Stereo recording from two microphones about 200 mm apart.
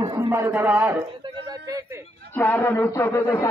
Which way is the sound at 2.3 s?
10° left (ahead or behind).